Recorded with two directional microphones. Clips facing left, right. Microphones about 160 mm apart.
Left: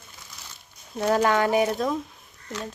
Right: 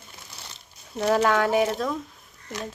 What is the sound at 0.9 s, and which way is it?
Speech, 5° left (ahead or behind).